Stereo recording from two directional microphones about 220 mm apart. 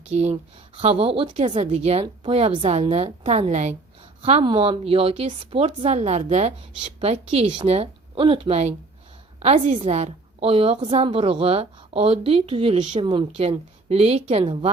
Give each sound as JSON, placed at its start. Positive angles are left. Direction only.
{"t": 0.1, "sound": "a woman's voice", "side_deg": -30}